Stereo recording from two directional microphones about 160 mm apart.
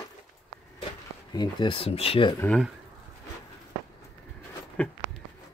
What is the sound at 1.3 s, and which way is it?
Speech, 30° left (ahead or behind).